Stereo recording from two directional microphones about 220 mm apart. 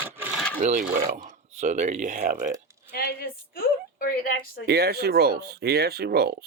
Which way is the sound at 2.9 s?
45° left (ahead or behind).